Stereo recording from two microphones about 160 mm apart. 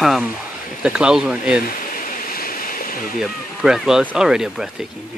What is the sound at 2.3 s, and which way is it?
Waves, 65° left (ahead or behind).